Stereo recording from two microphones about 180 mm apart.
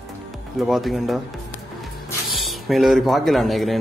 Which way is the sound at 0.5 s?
Centre (ahead or behind).